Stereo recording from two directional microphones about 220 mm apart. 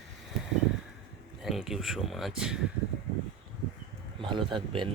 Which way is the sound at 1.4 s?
Centre (ahead or behind).